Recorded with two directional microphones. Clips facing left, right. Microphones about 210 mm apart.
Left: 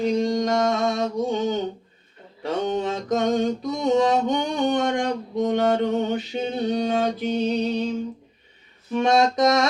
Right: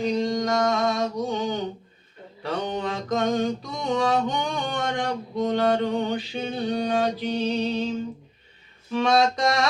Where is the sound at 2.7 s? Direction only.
20° left (ahead or behind).